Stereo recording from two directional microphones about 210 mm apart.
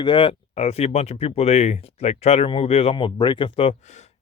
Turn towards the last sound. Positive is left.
turn(degrees=35)  # may be behind; listen again after turning